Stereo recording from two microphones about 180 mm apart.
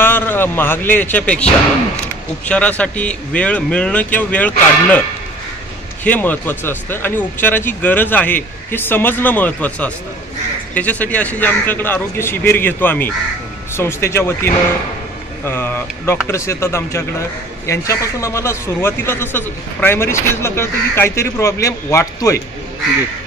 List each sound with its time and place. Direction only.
0.0 s a man's voice: 10° left (ahead or behind)
2.4 s a man's voice: 5° left (ahead or behind)
6.0 s a man's voice: 10° left (ahead or behind)